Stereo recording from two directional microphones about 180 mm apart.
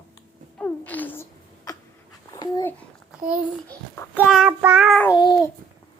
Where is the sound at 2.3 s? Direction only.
20° left (ahead or behind).